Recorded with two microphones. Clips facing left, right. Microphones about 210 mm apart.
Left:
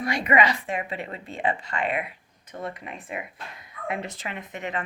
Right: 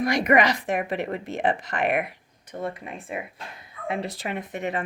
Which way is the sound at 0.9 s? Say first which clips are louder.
Right 6 dB; 75° right (ahead or behind).